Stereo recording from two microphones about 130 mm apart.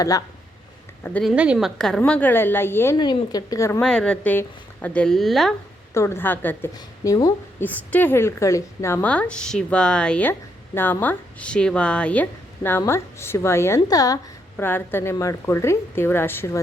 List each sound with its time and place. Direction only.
1.2 s speech: 5° right (ahead or behind); by 3.0 s 20° left (ahead or behind)
3.0 s a woman's voice: 30° left (ahead or behind)
3.8 s speech: 5° left (ahead or behind)
5.9 s speech: 20° left (ahead or behind)
6.7 s speech: 25° left (ahead or behind)
7.6 s speech: 15° left (ahead or behind); by 14.2 s 30° left (ahead or behind)
14.5 s speech: 15° left (ahead or behind)